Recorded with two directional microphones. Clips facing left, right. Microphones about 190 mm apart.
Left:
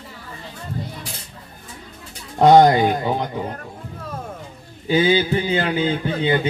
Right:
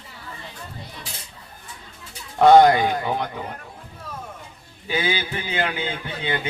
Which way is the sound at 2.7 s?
35° left (ahead or behind).